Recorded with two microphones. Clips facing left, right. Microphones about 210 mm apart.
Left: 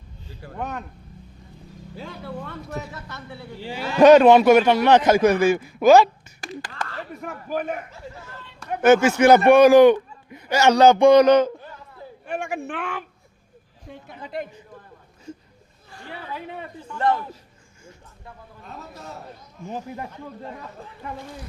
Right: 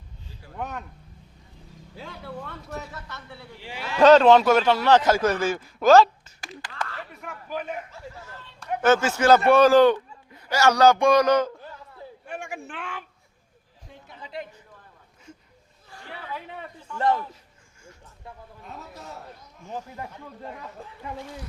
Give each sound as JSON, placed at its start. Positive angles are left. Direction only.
{"t": 0.5, "sound": "speech", "side_deg": -5}
{"t": 2.0, "sound": "speech", "side_deg": 0}
{"t": 2.6, "sound": "a man's voice", "side_deg": 10}
{"t": 3.6, "sound": "a man's voice", "side_deg": 35}
{"t": 4.0, "sound": "a man's voice", "side_deg": 15}
{"t": 7.1, "sound": "speech", "side_deg": 40}
{"t": 8.8, "sound": "a man's voice", "side_deg": 15}
{"t": 12.2, "sound": "speech", "side_deg": 75}
{"t": 13.9, "sound": "a sound", "side_deg": 55}
{"t": 19.6, "sound": "a man's voice", "side_deg": 20}